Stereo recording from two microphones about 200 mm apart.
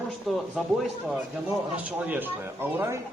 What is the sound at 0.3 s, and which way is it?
Speech, centre (ahead or behind).